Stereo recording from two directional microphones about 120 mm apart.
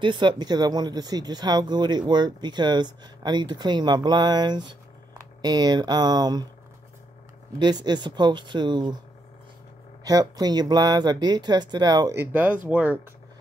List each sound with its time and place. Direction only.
0.0 s speech: 40° right (ahead or behind)
7.5 s speech: 35° right (ahead or behind)
10.0 s speech: 30° right (ahead or behind)
12.2 s speech: 15° right (ahead or behind)